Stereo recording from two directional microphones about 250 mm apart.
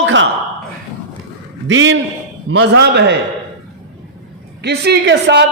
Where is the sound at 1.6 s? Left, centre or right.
Right.